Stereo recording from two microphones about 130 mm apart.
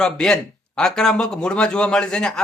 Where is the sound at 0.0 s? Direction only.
5° left (ahead or behind).